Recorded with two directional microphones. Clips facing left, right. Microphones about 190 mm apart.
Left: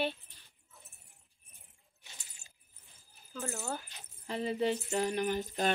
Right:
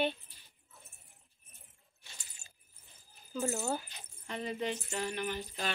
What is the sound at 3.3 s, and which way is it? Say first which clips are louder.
Speech: right 5 dB; 15° right (ahead or behind).